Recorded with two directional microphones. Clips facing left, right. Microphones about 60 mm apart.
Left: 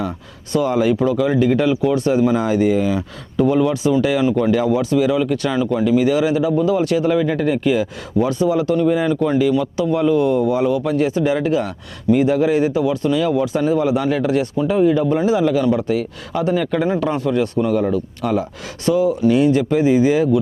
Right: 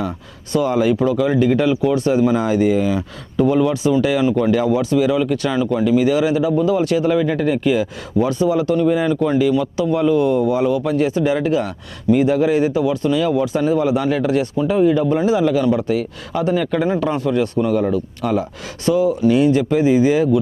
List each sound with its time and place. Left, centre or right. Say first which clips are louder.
0.5 s speech: even; right